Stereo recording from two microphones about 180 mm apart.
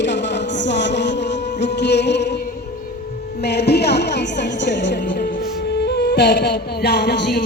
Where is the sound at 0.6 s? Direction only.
75° left (ahead or behind).